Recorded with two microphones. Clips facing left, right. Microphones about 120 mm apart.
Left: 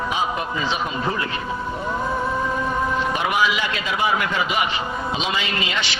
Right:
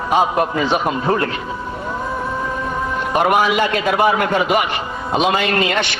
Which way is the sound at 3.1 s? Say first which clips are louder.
Right 11 dB; 50° right (ahead or behind).